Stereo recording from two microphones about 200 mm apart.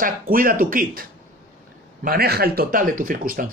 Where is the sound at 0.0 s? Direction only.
45° right (ahead or behind).